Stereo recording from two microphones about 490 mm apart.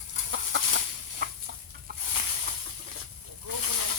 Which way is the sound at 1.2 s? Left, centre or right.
Centre.